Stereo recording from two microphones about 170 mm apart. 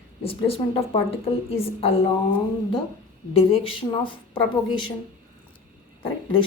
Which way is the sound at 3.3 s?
30° left (ahead or behind).